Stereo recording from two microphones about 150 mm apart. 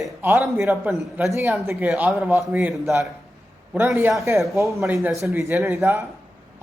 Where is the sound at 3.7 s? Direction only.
15° right (ahead or behind).